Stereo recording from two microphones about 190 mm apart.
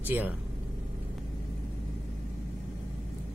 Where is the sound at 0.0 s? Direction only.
10° right (ahead or behind).